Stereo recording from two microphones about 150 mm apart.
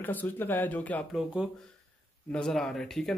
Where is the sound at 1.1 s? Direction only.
5° right (ahead or behind).